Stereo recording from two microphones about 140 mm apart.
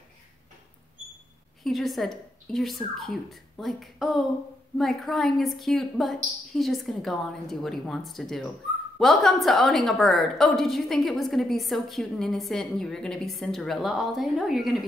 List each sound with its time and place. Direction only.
1.6 s a woman's voice: centre (ahead or behind)